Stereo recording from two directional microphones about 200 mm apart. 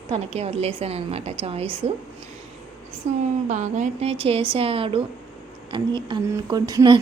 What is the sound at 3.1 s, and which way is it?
A woman's voice, 35° right (ahead or behind).